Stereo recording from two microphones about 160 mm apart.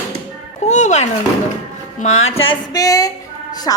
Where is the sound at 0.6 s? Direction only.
45° left (ahead or behind).